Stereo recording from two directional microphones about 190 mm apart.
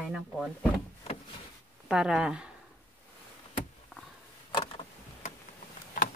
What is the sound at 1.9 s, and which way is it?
Speech, 5° right (ahead or behind).